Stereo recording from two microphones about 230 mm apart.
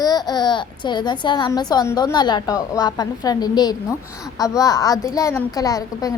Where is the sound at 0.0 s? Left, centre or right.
Centre.